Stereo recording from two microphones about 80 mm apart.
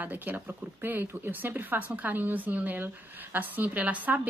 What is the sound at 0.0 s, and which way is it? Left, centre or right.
Speech, right.